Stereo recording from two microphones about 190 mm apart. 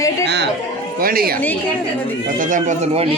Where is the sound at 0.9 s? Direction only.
50° right (ahead or behind); by 3.2 s 30° right (ahead or behind).